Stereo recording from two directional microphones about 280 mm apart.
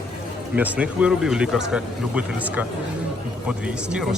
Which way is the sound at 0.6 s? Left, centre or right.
Centre.